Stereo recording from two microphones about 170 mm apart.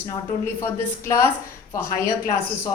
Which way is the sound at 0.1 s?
15° left (ahead or behind).